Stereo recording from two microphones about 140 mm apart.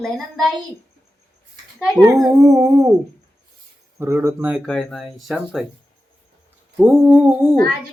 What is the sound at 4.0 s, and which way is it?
Humming, 20° right (ahead or behind).